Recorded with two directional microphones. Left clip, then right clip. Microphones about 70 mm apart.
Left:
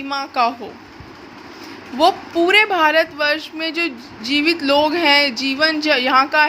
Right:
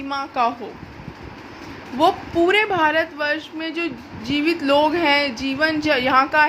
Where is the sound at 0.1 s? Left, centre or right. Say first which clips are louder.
Left 2 dB; left.